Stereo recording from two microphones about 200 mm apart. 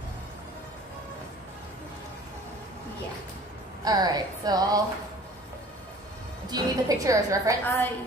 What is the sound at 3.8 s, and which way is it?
Speech, 20° right (ahead or behind).